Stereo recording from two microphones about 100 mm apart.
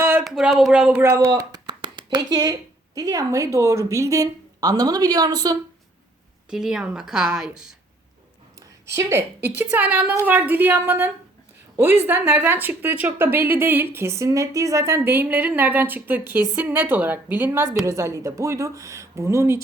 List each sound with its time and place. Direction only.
0.2 s speech: 5° right (ahead or behind)
1.1 s speech: 40° right (ahead or behind)
6.5 s a woman's voice: 5° right (ahead or behind)
8.9 s a woman's voice: 25° right (ahead or behind)